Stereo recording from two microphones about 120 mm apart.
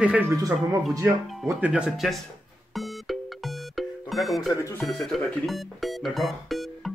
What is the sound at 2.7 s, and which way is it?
Music, centre (ahead or behind).